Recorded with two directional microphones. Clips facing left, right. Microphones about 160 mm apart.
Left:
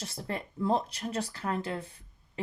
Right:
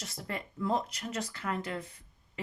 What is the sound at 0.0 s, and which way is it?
Speech, 30° left (ahead or behind).